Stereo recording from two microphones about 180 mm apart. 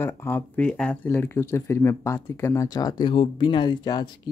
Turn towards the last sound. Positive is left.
turn(degrees=25)  # may be behind; listen again after turning